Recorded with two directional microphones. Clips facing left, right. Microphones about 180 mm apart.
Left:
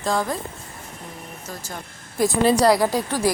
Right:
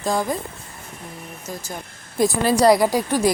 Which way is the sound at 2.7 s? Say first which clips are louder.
Right 3 dB; 15° right (ahead or behind).